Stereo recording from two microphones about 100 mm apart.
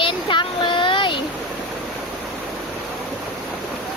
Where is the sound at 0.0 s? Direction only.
55° left (ahead or behind).